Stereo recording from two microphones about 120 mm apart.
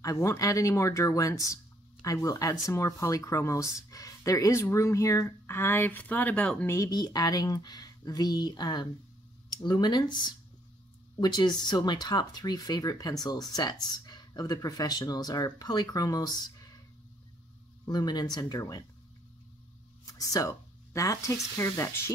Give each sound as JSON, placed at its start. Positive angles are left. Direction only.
{"t": 0.0, "sound": "speech", "side_deg": 25}
{"t": 6.7, "sound": "speech", "side_deg": 30}
{"t": 11.1, "sound": "speech", "side_deg": 35}
{"t": 17.8, "sound": "speech", "side_deg": 35}
{"t": 20.1, "sound": "speech", "side_deg": 25}